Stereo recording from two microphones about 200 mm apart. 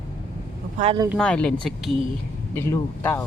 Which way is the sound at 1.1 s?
5° left (ahead or behind).